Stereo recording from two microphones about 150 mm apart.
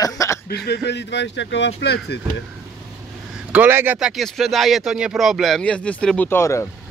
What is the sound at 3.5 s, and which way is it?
Speech, 15° right (ahead or behind).